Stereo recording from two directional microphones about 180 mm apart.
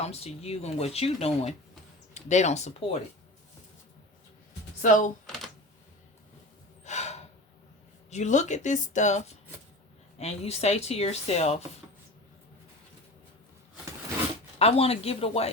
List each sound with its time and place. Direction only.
0.0 s speech: 35° left (ahead or behind)
4.8 s speech: 45° left (ahead or behind)
6.8 s gasp: 40° left (ahead or behind)
8.1 s speech: 40° left (ahead or behind)
14.6 s speech: 35° left (ahead or behind)